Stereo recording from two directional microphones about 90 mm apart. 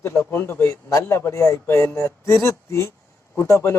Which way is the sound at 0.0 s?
25° left (ahead or behind).